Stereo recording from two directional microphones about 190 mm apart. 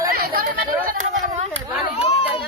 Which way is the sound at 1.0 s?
35° right (ahead or behind).